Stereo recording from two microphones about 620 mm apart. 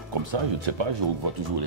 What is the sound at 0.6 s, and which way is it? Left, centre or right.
Speech, right.